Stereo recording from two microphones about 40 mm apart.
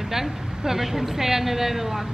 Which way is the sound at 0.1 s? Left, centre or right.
Centre.